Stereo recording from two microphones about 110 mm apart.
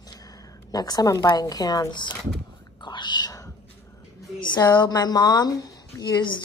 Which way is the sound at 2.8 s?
45° left (ahead or behind).